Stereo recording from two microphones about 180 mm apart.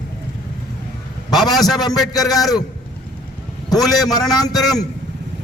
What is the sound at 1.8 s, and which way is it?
Speech, 20° left (ahead or behind).